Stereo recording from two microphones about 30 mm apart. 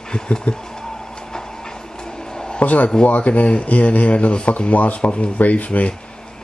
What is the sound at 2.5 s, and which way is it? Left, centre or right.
Speech, left.